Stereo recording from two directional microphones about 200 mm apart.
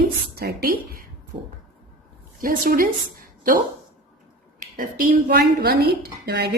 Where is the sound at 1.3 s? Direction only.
30° right (ahead or behind).